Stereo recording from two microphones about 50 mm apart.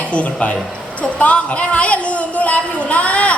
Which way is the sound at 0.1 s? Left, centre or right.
Left.